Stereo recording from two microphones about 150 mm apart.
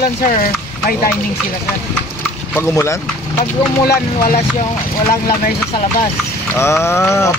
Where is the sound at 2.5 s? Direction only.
20° left (ahead or behind).